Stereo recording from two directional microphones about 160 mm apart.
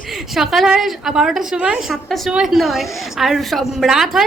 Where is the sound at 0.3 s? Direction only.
Centre (ahead or behind).